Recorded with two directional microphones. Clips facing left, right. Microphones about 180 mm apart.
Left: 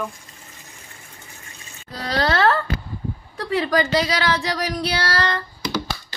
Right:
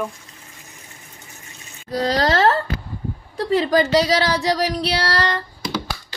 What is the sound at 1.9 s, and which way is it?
A woman's voice, 40° right (ahead or behind).